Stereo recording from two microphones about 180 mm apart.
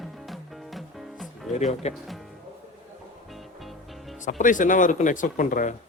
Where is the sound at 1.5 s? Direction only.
40° left (ahead or behind).